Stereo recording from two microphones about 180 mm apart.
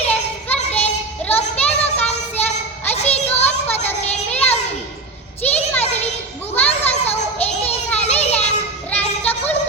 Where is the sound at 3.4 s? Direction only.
10° left (ahead or behind).